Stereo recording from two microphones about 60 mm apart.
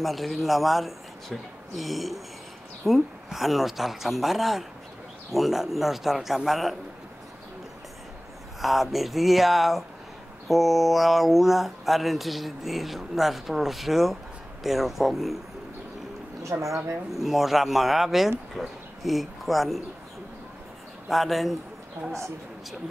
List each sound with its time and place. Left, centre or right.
0.0 s speech: centre
8.5 s speech: centre
16.6 s speech: right
17.1 s speech: centre
21.1 s a woman's voice: centre